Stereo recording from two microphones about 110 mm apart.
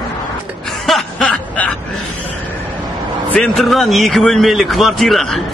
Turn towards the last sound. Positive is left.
turn(degrees=0)  # may be behind; listen again after turning